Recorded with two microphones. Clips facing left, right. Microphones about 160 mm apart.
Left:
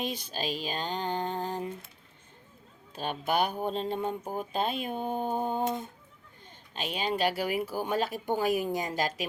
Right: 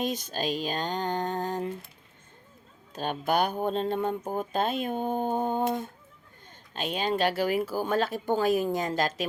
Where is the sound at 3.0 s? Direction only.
45° right (ahead or behind).